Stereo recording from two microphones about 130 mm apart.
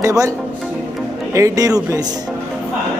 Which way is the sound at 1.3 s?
25° right (ahead or behind).